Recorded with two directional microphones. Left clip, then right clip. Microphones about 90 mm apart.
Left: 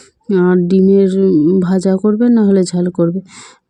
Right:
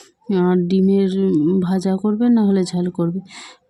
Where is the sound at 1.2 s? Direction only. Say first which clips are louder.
Left 6 dB; 10° left (ahead or behind).